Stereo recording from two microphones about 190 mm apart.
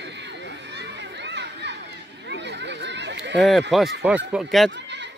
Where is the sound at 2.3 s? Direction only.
65° right (ahead or behind).